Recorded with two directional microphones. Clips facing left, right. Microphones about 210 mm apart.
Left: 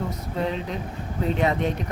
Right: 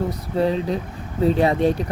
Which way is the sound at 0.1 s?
35° right (ahead or behind).